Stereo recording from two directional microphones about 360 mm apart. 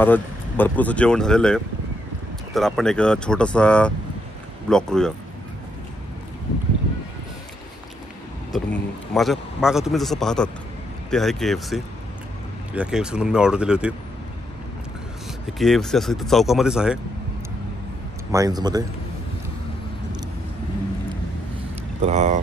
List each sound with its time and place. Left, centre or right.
0.0 s a man's voice: centre
8.5 s a man's voice: centre
15.6 s a man's voice: centre
18.3 s speech: centre
22.0 s speech: centre